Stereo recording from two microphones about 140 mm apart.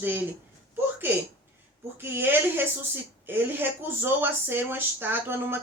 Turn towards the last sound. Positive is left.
turn(degrees=-15)  # may be behind; listen again after turning